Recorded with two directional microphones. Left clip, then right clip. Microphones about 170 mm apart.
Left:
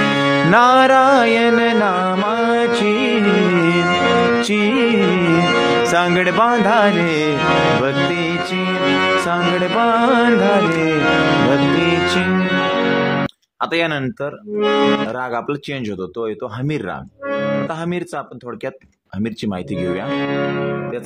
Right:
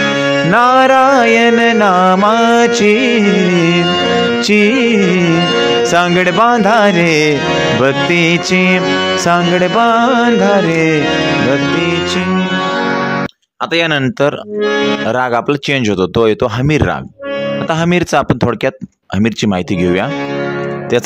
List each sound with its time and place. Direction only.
0.0 s music: 20° right (ahead or behind)
7.4 s music: 15° right (ahead or behind)
7.8 s music: 30° right (ahead or behind)
8.8 s music: 10° right (ahead or behind)
9.2 s music: 30° right (ahead or behind)
14.6 s music: 25° right (ahead or behind)
16.0 s speech: 45° right (ahead or behind)
17.8 s speech: 40° right (ahead or behind)
19.1 s music: 40° right (ahead or behind)